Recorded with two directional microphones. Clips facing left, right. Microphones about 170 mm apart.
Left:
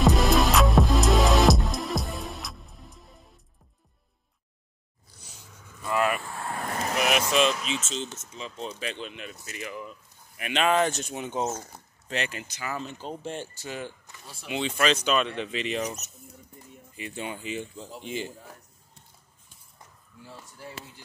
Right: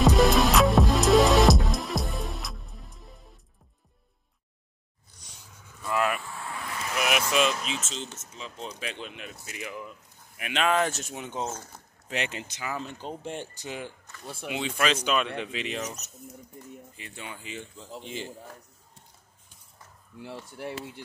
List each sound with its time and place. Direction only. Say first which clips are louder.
0.0 s music: right 1 dB; centre (ahead or behind)
5.9 s vehicle: left 1 dB; centre (ahead or behind)
6.4 s vehicle: left 5 dB; 50° left (ahead or behind)
7.3 s speech: left 2 dB; 5° right (ahead or behind)
10.3 s speech: left 2 dB; centre (ahead or behind)
12.3 s speech: even; 25° right (ahead or behind)
14.2 s speech: right 8 dB; 55° right (ahead or behind)
14.5 s speech: left 2 dB; 5° right (ahead or behind)
17.1 s speech: left 6 dB; 20° left (ahead or behind)
18.0 s speech: left 4 dB; 5° left (ahead or behind)
20.2 s speech: right 7 dB; 70° right (ahead or behind)